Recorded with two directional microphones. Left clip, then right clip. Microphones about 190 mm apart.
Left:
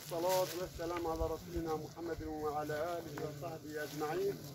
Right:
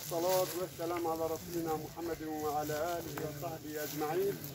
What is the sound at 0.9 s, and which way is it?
Speech, 15° left (ahead or behind).